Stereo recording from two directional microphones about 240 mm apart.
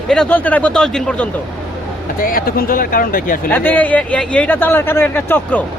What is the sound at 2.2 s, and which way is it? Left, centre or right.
Speech, left.